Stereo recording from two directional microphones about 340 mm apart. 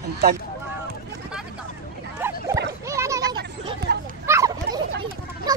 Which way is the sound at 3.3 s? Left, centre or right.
Right.